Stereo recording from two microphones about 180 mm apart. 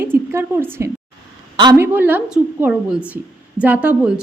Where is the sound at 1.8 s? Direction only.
10° right (ahead or behind).